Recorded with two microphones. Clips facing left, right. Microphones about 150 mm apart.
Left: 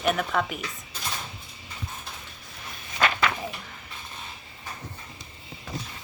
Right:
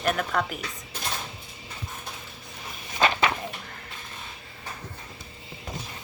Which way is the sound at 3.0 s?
25° right (ahead or behind).